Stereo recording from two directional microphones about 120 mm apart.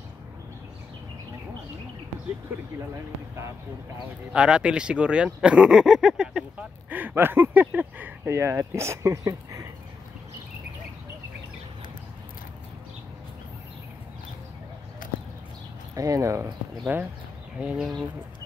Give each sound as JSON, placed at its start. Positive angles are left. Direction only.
{"t": 4.3, "sound": "speech", "side_deg": -10}
{"t": 15.0, "sound": "a sound", "side_deg": 90}
{"t": 15.9, "sound": "speech", "side_deg": -25}
{"t": 16.8, "sound": "speech", "side_deg": -15}